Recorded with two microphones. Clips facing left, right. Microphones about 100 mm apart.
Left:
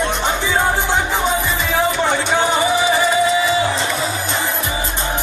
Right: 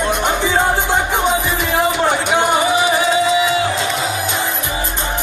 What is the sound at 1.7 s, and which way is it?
Music, 15° right (ahead or behind).